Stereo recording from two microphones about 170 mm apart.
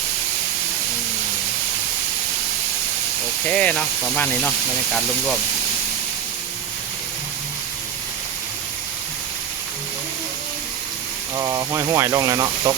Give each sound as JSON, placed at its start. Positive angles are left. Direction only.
{"t": 3.5, "sound": "speech", "side_deg": 10}
{"t": 11.3, "sound": "speech", "side_deg": -20}